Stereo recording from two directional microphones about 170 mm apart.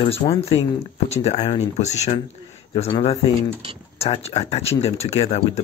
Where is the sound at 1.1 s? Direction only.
40° left (ahead or behind).